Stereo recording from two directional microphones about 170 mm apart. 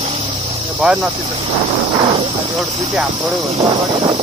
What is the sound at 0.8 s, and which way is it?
Speech, 5° right (ahead or behind).